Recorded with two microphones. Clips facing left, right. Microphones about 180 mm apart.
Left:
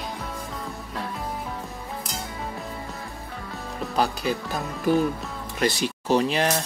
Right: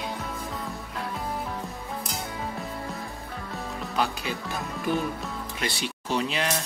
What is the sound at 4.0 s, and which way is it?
Speech, 35° left (ahead or behind).